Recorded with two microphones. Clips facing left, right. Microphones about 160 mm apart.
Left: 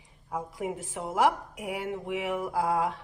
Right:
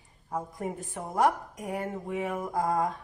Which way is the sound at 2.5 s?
85° left.